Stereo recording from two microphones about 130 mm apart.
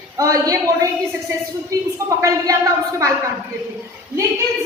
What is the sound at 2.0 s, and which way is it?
Speech, 25° right (ahead or behind).